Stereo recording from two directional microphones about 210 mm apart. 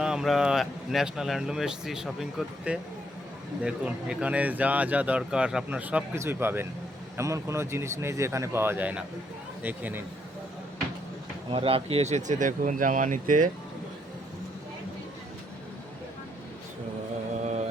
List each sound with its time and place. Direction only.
0.0 s speech: 5° right (ahead or behind)
11.5 s speech: 25° right (ahead or behind)